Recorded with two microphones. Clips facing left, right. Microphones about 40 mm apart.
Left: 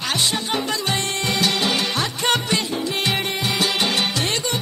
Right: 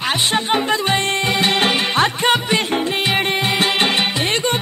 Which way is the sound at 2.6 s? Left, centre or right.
Right.